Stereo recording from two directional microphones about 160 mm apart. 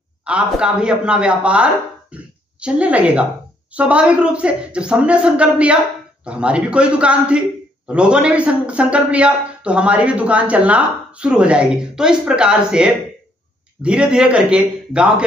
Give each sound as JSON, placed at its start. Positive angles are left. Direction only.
{"t": 0.2, "sound": "a man's voice", "side_deg": -5}